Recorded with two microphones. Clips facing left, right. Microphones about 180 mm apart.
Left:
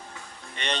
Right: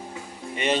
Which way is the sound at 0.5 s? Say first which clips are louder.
Right 8 dB; 5° right (ahead or behind).